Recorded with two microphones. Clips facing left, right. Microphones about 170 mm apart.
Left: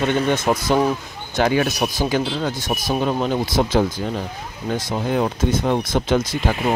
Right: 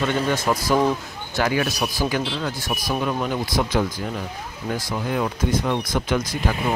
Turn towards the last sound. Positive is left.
turn(degrees=25)  # may be behind; listen again after turning